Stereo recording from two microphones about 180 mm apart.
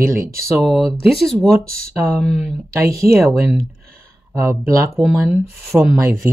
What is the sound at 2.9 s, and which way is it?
Speech, 15° right (ahead or behind).